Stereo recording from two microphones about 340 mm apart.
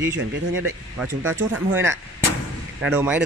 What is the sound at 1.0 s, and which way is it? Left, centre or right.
Speech, centre.